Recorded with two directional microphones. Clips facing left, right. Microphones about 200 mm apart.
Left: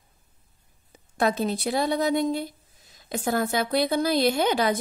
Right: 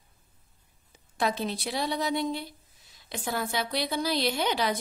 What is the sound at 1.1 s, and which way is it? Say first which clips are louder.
Speech: left 5 dB; 45° left (ahead or behind).